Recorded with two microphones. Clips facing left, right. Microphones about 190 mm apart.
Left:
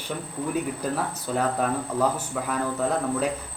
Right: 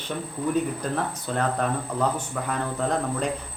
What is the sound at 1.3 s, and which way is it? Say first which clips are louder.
Speech: left 1 dB; 5° left (ahead or behind).